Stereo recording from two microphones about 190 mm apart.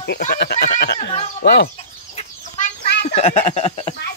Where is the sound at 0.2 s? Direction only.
55° left (ahead or behind).